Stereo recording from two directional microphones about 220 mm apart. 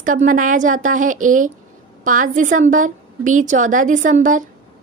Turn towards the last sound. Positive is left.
turn(degrees=-35)  # may be behind; listen again after turning